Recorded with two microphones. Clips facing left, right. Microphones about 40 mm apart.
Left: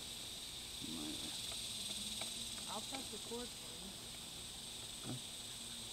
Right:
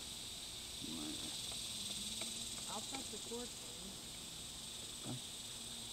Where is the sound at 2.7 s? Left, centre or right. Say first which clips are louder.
Even; centre.